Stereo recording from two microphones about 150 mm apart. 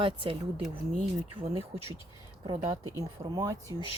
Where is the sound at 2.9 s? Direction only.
25° right (ahead or behind).